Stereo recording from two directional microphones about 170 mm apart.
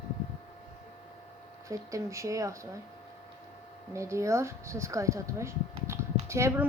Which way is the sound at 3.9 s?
15° right (ahead or behind).